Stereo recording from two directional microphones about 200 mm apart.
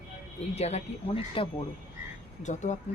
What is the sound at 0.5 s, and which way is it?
Speech, 30° left (ahead or behind).